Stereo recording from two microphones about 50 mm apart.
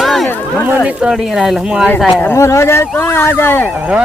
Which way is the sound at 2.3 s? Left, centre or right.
Left.